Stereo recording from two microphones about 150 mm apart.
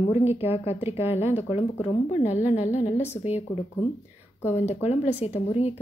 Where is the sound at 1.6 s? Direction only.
45° left (ahead or behind).